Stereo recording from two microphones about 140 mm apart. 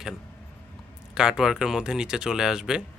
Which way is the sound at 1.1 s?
5° right (ahead or behind).